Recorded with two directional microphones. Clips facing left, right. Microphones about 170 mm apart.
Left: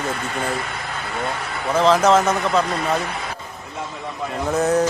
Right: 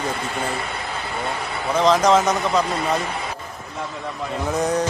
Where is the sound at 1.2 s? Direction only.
Centre (ahead or behind).